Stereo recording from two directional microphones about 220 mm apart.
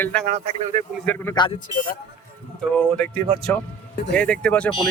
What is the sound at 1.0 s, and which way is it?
Speech, 10° left (ahead or behind).